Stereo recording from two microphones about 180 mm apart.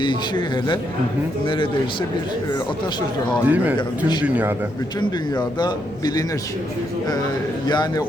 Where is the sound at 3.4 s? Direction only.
10° right (ahead or behind).